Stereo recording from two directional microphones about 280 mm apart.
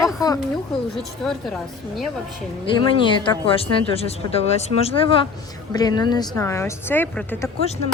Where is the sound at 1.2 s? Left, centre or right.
Centre.